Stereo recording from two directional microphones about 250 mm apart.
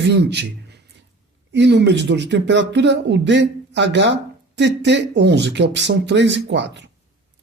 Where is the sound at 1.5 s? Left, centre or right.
Right.